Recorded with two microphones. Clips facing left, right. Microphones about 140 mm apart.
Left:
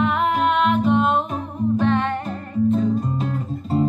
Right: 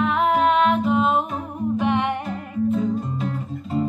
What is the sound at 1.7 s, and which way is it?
Music, 15° right (ahead or behind).